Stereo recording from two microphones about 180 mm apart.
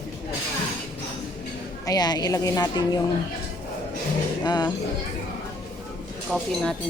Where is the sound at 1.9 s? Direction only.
20° left (ahead or behind).